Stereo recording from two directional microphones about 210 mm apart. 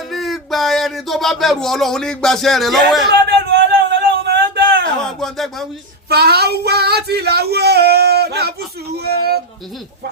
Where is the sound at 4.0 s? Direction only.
50° right (ahead or behind).